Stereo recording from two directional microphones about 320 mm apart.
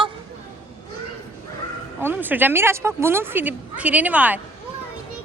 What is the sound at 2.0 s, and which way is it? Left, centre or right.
Speech, centre.